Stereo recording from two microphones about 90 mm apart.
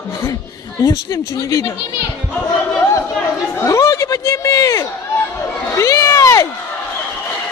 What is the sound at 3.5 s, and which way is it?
Speech, 35° left (ahead or behind).